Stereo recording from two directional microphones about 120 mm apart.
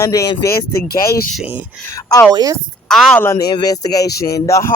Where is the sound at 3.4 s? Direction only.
35° left (ahead or behind).